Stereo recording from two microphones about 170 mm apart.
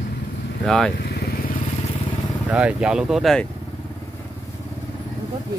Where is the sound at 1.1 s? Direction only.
65° left (ahead or behind).